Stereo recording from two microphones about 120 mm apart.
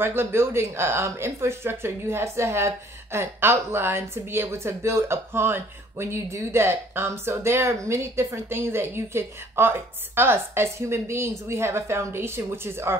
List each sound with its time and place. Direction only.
0.0 s speech: 20° right (ahead or behind)